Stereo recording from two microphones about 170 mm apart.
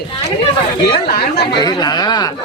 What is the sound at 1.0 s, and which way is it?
Speech, 65° left (ahead or behind).